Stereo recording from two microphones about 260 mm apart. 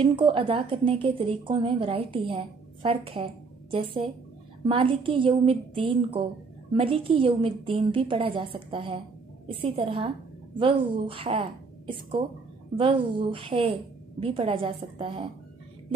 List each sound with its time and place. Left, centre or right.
0.0 s a woman's voice: centre
4.6 s a woman's voice: right